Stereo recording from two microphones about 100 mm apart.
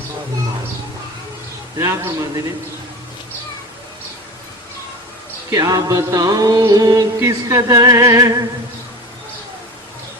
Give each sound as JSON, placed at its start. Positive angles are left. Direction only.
{"t": 1.8, "sound": "music", "side_deg": -35}
{"t": 5.5, "sound": "music", "side_deg": -35}